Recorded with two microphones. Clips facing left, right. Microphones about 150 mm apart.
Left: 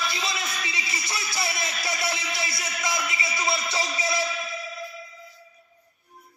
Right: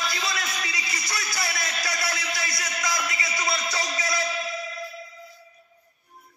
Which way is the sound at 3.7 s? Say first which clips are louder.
Left 1 dB; 25° left (ahead or behind).